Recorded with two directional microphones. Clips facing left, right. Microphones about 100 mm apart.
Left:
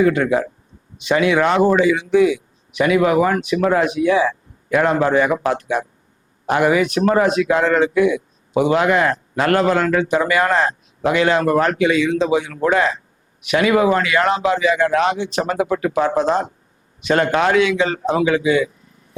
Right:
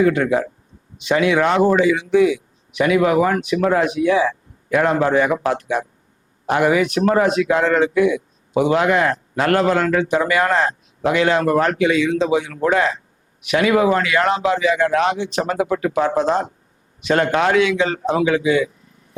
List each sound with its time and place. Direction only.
0.0 s speech: 20° left (ahead or behind)